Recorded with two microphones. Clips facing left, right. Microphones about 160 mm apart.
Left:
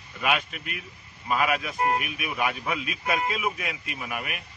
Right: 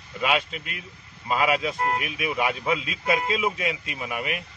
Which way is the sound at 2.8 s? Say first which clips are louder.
Right 2 dB; 90° right.